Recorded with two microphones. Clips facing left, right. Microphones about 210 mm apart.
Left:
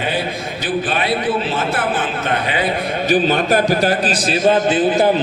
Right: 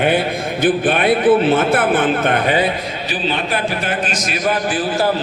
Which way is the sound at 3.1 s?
45° left (ahead or behind).